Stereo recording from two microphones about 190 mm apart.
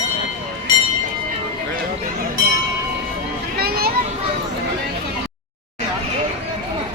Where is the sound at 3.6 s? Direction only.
55° right (ahead or behind).